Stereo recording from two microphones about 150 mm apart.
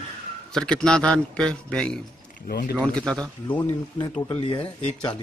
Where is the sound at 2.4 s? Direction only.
90° left.